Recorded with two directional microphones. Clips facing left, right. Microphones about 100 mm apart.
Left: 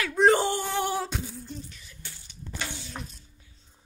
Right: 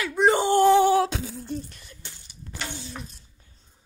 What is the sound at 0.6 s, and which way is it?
Female singing, 90° right.